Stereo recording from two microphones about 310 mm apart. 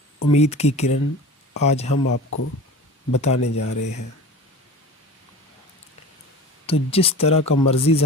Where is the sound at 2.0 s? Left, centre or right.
Left.